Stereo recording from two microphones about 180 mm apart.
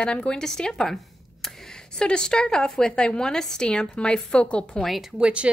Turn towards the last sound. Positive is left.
turn(degrees=-5)  # may be behind; listen again after turning